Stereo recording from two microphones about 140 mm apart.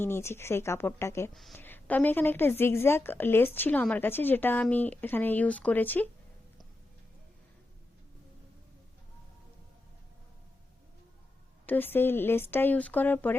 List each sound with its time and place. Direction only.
0.0 s a woman's voice: 20° left (ahead or behind)
1.3 s speech: centre (ahead or behind)
1.5 s a woman's voice: 15° left (ahead or behind)
11.6 s a woman's voice: 15° left (ahead or behind)